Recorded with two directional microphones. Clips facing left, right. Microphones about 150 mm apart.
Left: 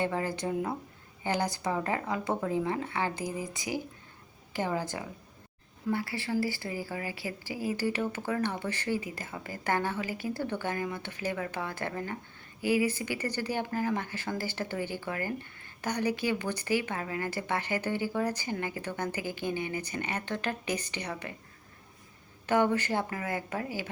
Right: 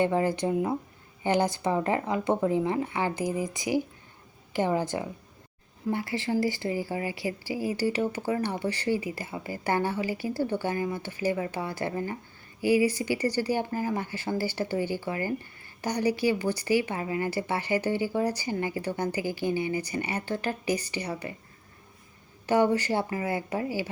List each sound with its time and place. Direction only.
0.0 s a woman's voice: 20° right (ahead or behind)
22.4 s a woman's voice: 10° right (ahead or behind)